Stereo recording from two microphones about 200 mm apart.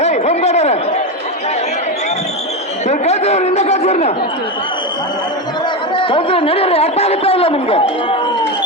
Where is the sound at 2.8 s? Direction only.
35° left (ahead or behind).